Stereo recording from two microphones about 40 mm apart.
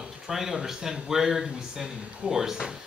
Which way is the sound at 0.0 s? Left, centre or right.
Centre.